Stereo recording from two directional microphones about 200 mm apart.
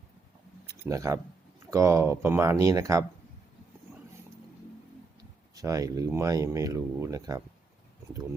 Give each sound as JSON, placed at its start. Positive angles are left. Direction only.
{"t": 0.9, "sound": "speech", "side_deg": -15}
{"t": 5.5, "sound": "speech", "side_deg": -15}